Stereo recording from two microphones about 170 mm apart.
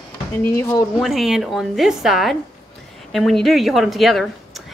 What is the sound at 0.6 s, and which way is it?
Speech, 20° left (ahead or behind).